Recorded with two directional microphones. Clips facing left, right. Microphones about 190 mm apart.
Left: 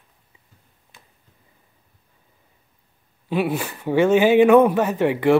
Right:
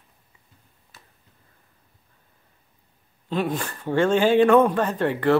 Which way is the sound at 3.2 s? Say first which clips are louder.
Left 3 dB; 10° left (ahead or behind).